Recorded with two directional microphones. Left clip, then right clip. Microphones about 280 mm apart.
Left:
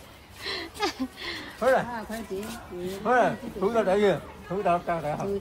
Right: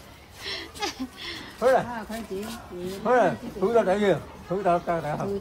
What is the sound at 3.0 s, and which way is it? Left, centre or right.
Speech, right.